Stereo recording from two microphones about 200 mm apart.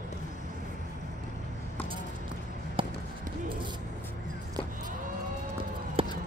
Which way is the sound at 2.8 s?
25° right (ahead or behind).